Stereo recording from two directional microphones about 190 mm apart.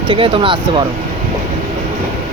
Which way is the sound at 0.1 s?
25° right (ahead or behind).